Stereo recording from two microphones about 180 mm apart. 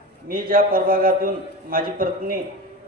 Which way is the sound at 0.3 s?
55° right (ahead or behind).